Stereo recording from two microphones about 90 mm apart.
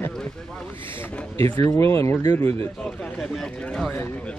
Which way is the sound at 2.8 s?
10° left (ahead or behind).